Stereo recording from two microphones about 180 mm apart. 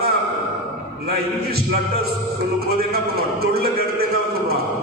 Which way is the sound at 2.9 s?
60° right (ahead or behind).